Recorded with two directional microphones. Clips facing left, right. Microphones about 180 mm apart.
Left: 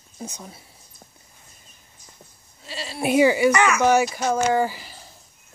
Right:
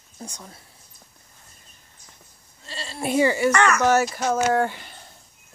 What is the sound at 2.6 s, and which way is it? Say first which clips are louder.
Speech: left 3 dB; 10° left (ahead or behind).